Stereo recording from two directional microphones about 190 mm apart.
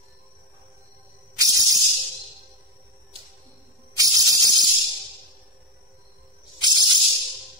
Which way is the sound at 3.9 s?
20° right (ahead or behind).